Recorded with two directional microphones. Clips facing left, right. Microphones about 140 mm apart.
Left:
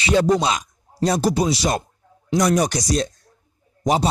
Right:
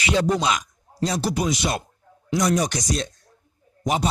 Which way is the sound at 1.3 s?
30° left (ahead or behind).